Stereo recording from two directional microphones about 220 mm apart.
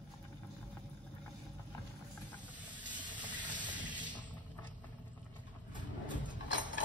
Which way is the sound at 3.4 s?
20° right (ahead or behind).